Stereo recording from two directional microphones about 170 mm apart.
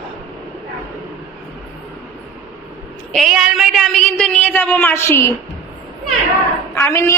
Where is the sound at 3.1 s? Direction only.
Centre (ahead or behind); by 5.4 s 15° left (ahead or behind).